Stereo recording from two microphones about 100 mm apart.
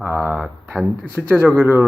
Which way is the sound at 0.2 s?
5° left (ahead or behind).